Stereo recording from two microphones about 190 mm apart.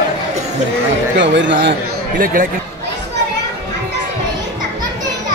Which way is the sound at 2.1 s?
45° right (ahead or behind).